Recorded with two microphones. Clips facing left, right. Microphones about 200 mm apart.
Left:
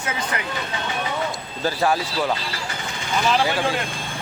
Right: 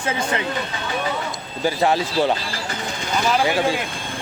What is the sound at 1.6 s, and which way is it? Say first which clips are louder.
Speech: right 2 dB; 15° right (ahead or behind).